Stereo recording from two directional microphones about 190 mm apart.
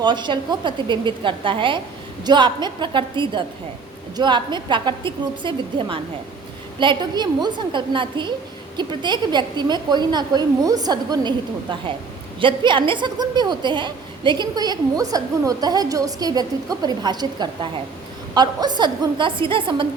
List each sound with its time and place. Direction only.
0.0 s a woman's voice: 25° right (ahead or behind)